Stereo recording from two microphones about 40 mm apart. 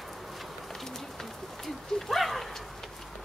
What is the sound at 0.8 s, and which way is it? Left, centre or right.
Bird, centre.